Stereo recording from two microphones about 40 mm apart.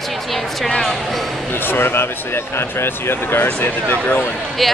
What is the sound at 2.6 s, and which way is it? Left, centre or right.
Speech, left.